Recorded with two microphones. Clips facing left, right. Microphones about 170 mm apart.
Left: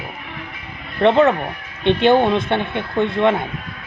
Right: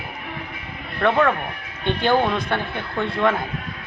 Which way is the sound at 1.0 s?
25° left (ahead or behind).